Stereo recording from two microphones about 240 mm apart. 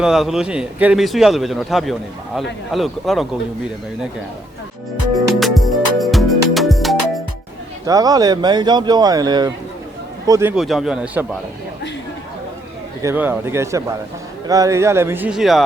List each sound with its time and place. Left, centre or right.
0.0 s speech: centre
5.1 s music: centre
7.9 s speech: centre
10.5 s speech: centre
13.0 s speech: centre